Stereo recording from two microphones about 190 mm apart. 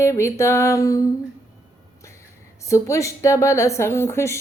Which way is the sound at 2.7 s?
15° left (ahead or behind).